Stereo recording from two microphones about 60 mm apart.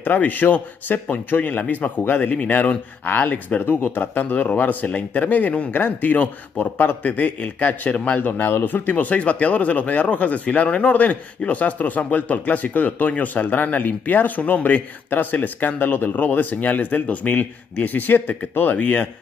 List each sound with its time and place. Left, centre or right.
0.0 s a man's voice: left